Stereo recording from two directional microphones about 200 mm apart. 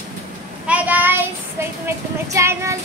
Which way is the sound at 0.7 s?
5° right (ahead or behind).